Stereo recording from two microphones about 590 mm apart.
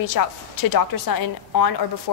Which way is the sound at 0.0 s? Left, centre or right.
Left.